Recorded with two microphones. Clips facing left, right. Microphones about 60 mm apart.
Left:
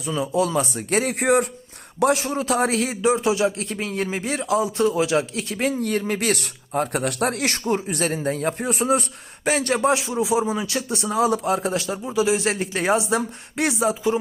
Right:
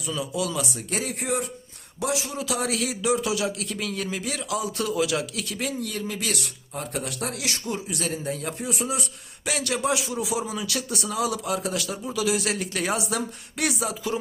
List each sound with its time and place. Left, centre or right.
0.0 s a man's voice: left